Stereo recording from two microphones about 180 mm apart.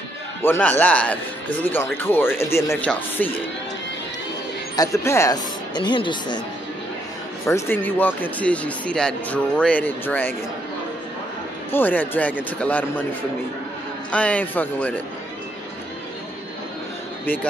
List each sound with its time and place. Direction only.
0.4 s a man's voice: 10° left (ahead or behind)
4.7 s speech: 15° left (ahead or behind)
7.4 s a man's voice: 15° left (ahead or behind)
11.7 s a man's voice: 10° left (ahead or behind)
14.1 s a man's voice: 5° left (ahead or behind)